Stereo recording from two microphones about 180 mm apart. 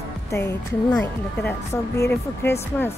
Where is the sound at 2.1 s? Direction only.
10° left (ahead or behind).